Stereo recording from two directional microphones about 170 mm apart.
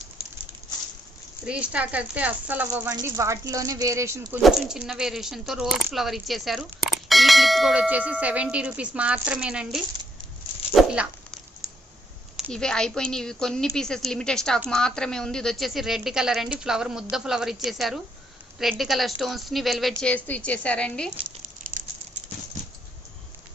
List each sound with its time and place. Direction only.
1.5 s speech: 5° right (ahead or behind)
4.4 s speech: centre (ahead or behind)
10.8 s dog: 5° right (ahead or behind)
12.4 s speech: 5° left (ahead or behind)
21.4 s a sound: 50° right (ahead or behind)